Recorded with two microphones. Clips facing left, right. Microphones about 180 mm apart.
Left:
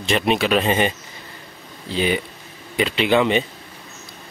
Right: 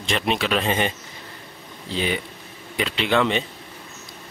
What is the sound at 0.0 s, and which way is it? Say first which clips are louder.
Speech: left 4 dB; 5° left (ahead or behind).